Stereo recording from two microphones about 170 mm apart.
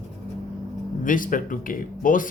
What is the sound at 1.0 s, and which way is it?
Speech, 50° left (ahead or behind).